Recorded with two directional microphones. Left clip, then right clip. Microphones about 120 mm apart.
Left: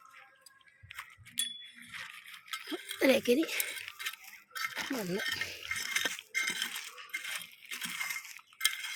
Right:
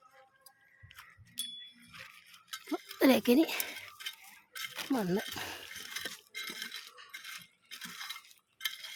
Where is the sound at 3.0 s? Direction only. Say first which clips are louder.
Right 1 dB; 50° right (ahead or behind).